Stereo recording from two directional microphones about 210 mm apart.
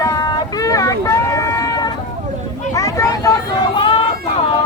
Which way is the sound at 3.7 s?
25° left (ahead or behind).